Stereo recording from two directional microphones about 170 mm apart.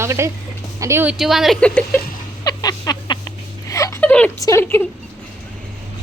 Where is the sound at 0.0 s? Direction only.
15° right (ahead or behind).